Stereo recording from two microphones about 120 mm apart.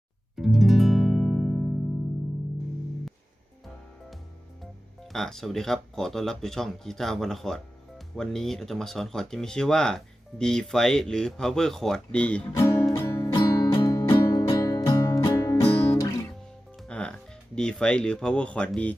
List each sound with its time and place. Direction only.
0.3 s music: centre (ahead or behind)
5.1 s speech: 5° left (ahead or behind)
12.5 s music: 30° left (ahead or behind)
16.9 s speech: 10° left (ahead or behind)